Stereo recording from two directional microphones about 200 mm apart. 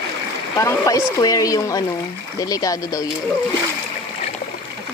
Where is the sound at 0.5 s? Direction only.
15° left (ahead or behind).